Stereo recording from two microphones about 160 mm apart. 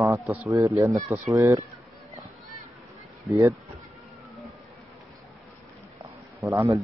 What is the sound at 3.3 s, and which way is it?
Speech, 20° right (ahead or behind).